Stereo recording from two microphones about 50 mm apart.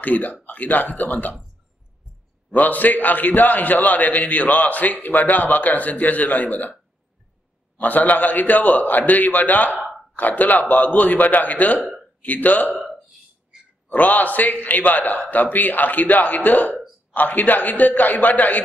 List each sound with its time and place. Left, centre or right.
0.0 s a man's voice: left
2.5 s a man's voice: left
7.7 s a man's voice: left
9.7 s a sound: centre
10.1 s a man's voice: left
12.7 s a sound: centre
13.8 s a man's voice: left